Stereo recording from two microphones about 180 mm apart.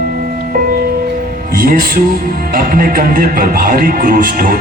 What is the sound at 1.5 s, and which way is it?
Speech, 55° right (ahead or behind).